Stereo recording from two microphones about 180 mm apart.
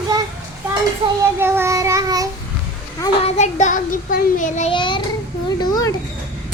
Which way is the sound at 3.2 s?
40° left (ahead or behind).